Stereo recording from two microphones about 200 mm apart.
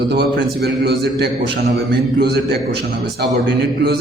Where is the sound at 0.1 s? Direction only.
55° right (ahead or behind).